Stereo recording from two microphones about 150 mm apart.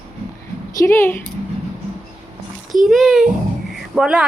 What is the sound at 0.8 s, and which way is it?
Speech, 15° left (ahead or behind).